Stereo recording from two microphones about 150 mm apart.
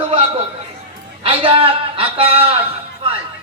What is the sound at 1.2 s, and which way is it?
A man's voice, 35° right (ahead or behind).